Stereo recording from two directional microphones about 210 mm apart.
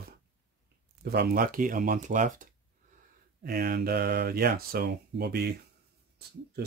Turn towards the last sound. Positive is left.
turn(degrees=-50)  # may be behind; listen again after turning